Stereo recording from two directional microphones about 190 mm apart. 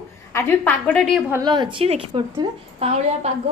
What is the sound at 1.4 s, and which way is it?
A woman's voice, 25° right (ahead or behind).